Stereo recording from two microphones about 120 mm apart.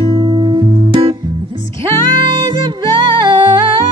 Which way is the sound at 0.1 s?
35° right (ahead or behind).